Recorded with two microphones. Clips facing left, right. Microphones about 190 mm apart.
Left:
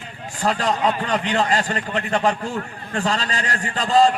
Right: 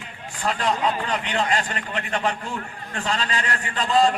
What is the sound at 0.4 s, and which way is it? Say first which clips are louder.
A man's voice: left 3 dB; 35° left (ahead or behind).